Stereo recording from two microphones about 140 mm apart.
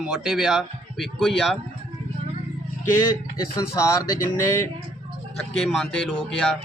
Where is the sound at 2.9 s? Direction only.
25° left (ahead or behind).